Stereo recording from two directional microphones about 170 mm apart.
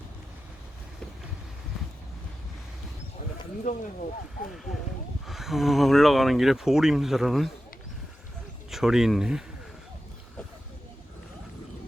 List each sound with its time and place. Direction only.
3.7 s speech: 45° left (ahead or behind)
5.2 s speech: centre (ahead or behind)
8.7 s speech: centre (ahead or behind)